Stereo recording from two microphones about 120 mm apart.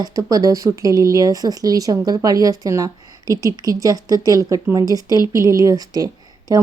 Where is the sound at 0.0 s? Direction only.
30° right (ahead or behind).